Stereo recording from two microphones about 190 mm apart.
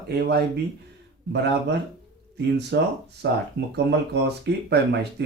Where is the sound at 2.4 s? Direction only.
65° right (ahead or behind).